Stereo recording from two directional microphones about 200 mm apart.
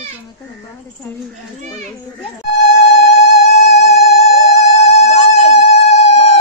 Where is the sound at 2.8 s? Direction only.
35° left (ahead or behind).